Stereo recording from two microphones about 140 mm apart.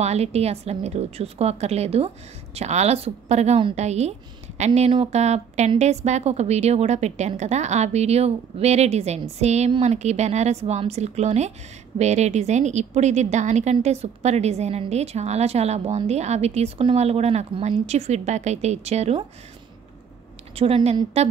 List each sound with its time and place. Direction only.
0.0 s a woman's voice: 50° right (ahead or behind)
20.5 s a woman's voice: 45° right (ahead or behind)